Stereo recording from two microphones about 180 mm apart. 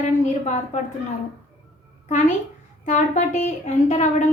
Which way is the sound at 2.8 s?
40° left (ahead or behind).